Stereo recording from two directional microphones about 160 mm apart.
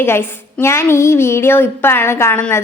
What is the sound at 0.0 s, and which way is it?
A woman's voice, 15° left (ahead or behind).